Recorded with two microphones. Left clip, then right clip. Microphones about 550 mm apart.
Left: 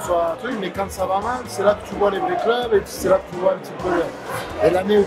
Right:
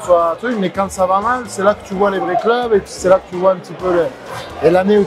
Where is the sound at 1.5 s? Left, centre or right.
Right.